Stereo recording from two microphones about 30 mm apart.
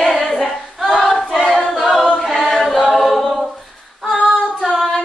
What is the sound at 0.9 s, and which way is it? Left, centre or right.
Choir, centre.